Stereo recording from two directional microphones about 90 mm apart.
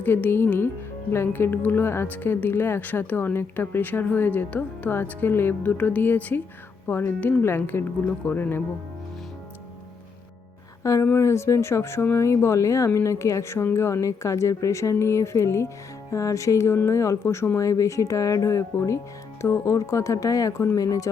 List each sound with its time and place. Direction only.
0.0 s speech: 25° left (ahead or behind)
11.0 s speech: 30° left (ahead or behind)